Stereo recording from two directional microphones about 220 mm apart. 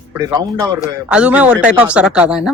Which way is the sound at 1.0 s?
5° right (ahead or behind).